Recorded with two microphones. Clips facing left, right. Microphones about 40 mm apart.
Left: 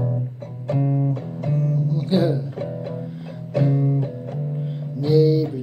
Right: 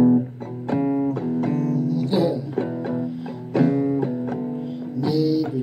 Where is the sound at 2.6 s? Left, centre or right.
Right.